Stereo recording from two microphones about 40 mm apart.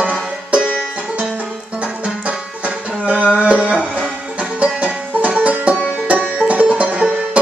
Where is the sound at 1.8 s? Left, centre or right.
Right.